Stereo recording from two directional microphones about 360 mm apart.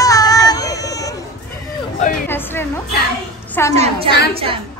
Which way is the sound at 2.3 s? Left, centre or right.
Centre.